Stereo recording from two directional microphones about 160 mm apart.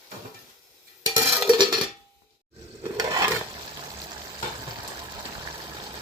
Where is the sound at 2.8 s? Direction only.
25° right (ahead or behind).